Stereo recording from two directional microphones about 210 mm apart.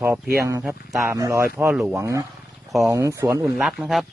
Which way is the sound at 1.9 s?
15° right (ahead or behind).